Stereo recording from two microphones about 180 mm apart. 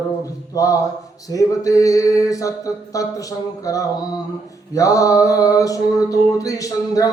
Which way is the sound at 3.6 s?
20° left (ahead or behind).